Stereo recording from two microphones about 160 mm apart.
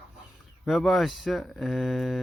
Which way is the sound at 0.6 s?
Centre (ahead or behind).